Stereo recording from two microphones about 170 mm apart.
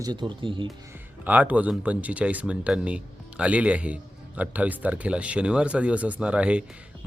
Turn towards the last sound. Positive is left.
turn(degrees=-5)  # may be behind; listen again after turning